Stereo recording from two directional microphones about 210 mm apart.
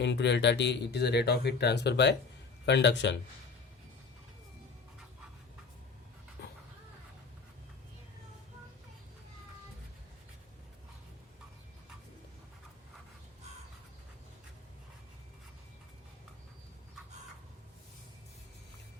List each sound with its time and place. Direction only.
0.0 s a man's voice: 55° left (ahead or behind)